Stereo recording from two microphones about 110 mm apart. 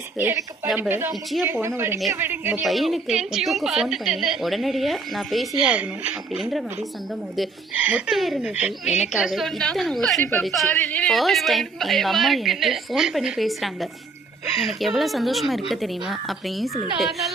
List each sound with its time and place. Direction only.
0.2 s speech: 20° right (ahead or behind)
2.6 s a woman's voice: centre (ahead or behind)
7.8 s a woman's voice: 10° right (ahead or behind)
10.7 s a woman's voice: 15° left (ahead or behind)
11.1 s a woman's voice: centre (ahead or behind)